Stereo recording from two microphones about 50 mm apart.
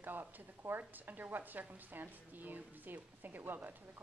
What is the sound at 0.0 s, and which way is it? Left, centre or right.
A woman's voice, right.